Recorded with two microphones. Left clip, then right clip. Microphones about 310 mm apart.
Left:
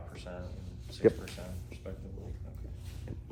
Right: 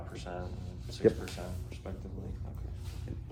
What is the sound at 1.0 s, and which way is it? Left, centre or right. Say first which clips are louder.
Speech: left 1 dB; left.